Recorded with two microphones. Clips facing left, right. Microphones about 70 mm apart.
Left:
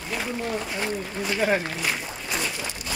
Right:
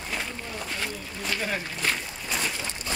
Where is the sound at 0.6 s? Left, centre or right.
Centre.